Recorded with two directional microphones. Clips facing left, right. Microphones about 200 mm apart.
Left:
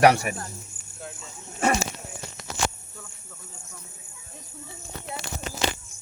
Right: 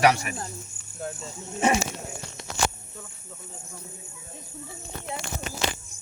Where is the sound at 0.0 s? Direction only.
55° left (ahead or behind).